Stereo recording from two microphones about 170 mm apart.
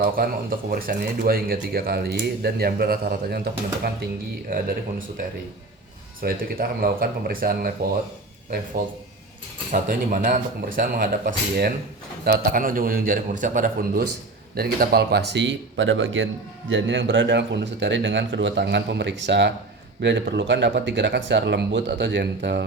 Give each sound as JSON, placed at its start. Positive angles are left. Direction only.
{"t": 0.0, "sound": "speech", "side_deg": -60}
{"t": 6.2, "sound": "speech", "side_deg": -60}
{"t": 9.7, "sound": "speech", "side_deg": -55}
{"t": 14.5, "sound": "a man's voice", "side_deg": -65}